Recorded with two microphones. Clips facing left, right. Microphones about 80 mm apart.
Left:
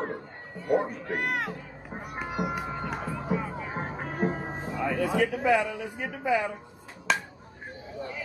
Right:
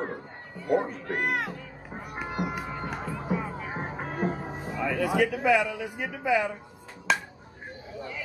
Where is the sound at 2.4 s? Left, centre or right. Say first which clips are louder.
Left 1 dB; centre.